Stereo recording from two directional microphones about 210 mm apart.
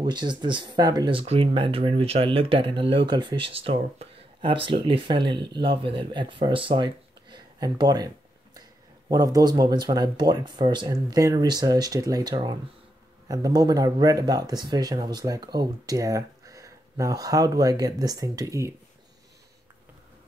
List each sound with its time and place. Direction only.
0.0 s speech: 20° right (ahead or behind)
9.1 s speech: 15° right (ahead or behind)